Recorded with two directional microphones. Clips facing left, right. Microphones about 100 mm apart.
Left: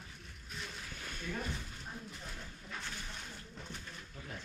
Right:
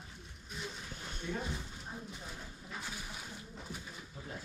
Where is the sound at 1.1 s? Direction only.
20° right (ahead or behind).